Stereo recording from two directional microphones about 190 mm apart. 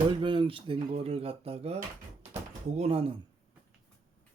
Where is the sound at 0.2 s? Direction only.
25° right (ahead or behind).